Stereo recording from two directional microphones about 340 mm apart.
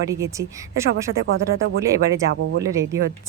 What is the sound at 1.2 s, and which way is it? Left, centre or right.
Speech, right.